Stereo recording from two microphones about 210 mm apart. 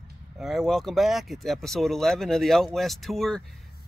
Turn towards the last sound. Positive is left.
turn(degrees=0)  # may be behind; listen again after turning